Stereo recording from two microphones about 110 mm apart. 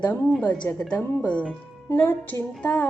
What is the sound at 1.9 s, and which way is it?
Music, 20° left (ahead or behind).